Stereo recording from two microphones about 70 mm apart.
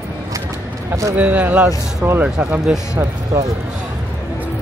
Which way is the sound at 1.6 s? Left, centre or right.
Right.